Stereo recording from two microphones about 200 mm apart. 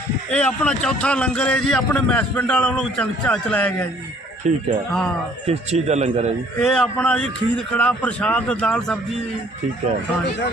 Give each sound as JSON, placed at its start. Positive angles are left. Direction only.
{"t": 0.3, "sound": "a man's voice", "side_deg": 5}
{"t": 4.4, "sound": "a man's voice", "side_deg": -35}
{"t": 4.9, "sound": "a man's voice", "side_deg": 5}
{"t": 5.5, "sound": "a man's voice", "side_deg": -30}
{"t": 6.6, "sound": "a man's voice", "side_deg": 0}